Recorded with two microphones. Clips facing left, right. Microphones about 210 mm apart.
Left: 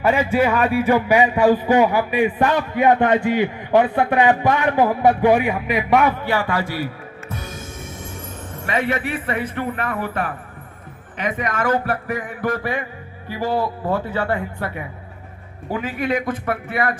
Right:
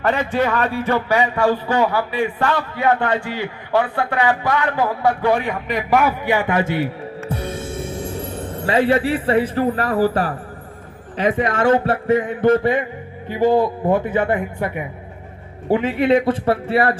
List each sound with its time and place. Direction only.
0.0 s a man's voice: 10° left (ahead or behind)
6.2 s speech: 20° right (ahead or behind)